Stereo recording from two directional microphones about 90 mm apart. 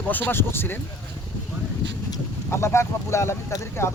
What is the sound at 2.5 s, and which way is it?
Speech, 30° left (ahead or behind).